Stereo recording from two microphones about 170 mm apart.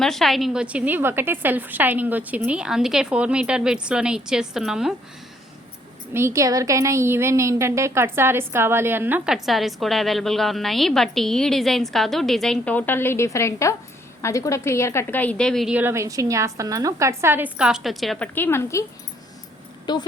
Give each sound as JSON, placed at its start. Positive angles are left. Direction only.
{"t": 0.0, "sound": "a woman's voice", "side_deg": 0}
{"t": 6.1, "sound": "a woman's voice", "side_deg": -15}
{"t": 15.8, "sound": "a woman's voice", "side_deg": -15}
{"t": 18.3, "sound": "a woman's voice", "side_deg": 15}